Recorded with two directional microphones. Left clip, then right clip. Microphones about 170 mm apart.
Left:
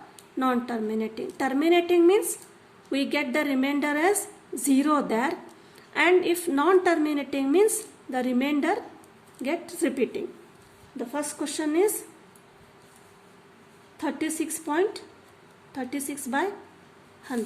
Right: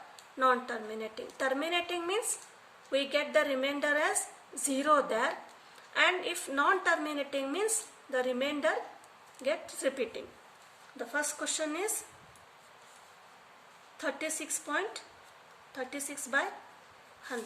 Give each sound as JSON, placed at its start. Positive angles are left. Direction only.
{"t": 0.3, "sound": "a woman's voice", "side_deg": 40}
{"t": 10.9, "sound": "speech", "side_deg": 25}
{"t": 14.0, "sound": "a woman's voice", "side_deg": 30}